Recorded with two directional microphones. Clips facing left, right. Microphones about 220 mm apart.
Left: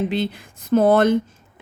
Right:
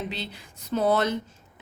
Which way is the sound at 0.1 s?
50° left (ahead or behind).